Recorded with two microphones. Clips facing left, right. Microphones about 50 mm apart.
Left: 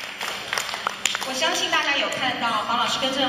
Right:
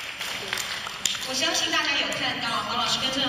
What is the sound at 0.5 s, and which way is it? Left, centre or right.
Applause, centre.